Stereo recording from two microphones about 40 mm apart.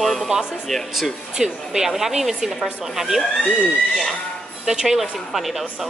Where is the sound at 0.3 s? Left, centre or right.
Centre.